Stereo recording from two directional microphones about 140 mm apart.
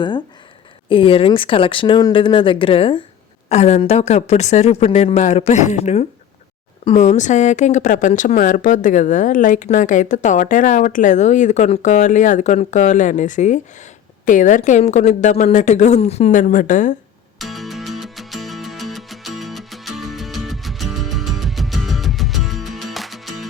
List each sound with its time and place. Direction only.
0.9 s speech: 40° left (ahead or behind)
3.5 s a woman's voice: 50° left (ahead or behind); by 16.9 s 65° left (ahead or behind)
17.3 s music: centre (ahead or behind)